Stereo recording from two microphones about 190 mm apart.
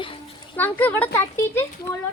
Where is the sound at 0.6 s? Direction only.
10° left (ahead or behind).